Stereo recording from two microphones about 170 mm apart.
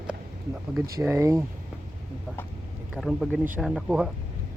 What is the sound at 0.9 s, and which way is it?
Speech, 15° right (ahead or behind).